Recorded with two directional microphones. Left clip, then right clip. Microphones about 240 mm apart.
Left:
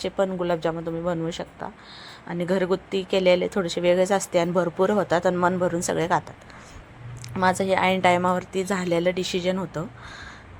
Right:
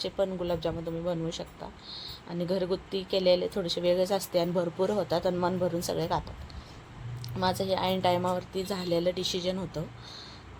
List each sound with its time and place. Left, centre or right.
0.0 s a woman's voice: centre
1.9 s speech: left
2.3 s a woman's voice: centre
7.3 s a woman's voice: centre